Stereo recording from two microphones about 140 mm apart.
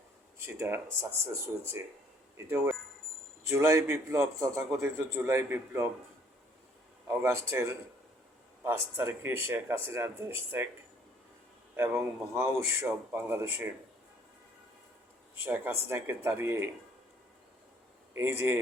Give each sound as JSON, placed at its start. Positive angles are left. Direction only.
{"t": 0.4, "sound": "a man's voice", "side_deg": -15}
{"t": 7.1, "sound": "a man's voice", "side_deg": -20}
{"t": 12.3, "sound": "speech", "side_deg": -20}
{"t": 15.4, "sound": "speech", "side_deg": -15}
{"t": 18.1, "sound": "a man's voice", "side_deg": -20}